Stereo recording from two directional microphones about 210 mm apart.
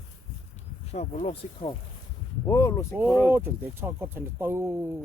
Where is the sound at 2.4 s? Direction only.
15° left (ahead or behind).